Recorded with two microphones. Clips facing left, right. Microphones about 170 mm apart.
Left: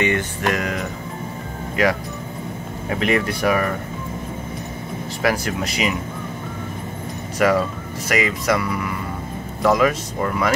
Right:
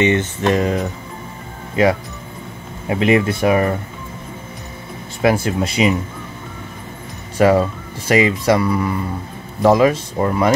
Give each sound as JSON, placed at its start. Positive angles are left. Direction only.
{"t": 0.0, "sound": "speech", "side_deg": -25}
{"t": 2.9, "sound": "speech", "side_deg": -20}
{"t": 5.2, "sound": "speech", "side_deg": -25}
{"t": 7.3, "sound": "speech", "side_deg": -30}